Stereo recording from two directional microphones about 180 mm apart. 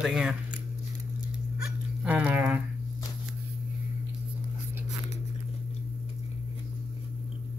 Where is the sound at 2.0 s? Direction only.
5° right (ahead or behind).